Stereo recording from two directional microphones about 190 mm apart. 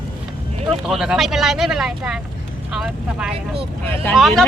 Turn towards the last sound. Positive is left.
turn(degrees=0)  # may be behind; listen again after turning